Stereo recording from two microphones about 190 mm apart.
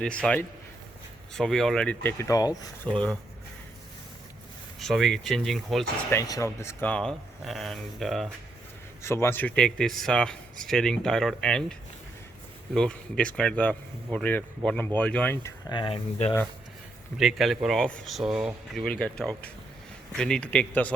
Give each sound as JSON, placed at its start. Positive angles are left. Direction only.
{"t": 0.0, "sound": "speech", "side_deg": 5}
{"t": 2.9, "sound": "speech", "side_deg": 5}
{"t": 4.8, "sound": "speech", "side_deg": 0}
{"t": 6.1, "sound": "speech", "side_deg": 15}
{"t": 9.0, "sound": "speech", "side_deg": 15}
{"t": 12.7, "sound": "speech", "side_deg": 5}
{"t": 15.7, "sound": "speech", "side_deg": 25}
{"t": 17.2, "sound": "speech", "side_deg": 0}